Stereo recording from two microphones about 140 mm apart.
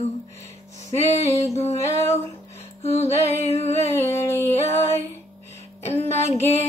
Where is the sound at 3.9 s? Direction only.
20° left (ahead or behind).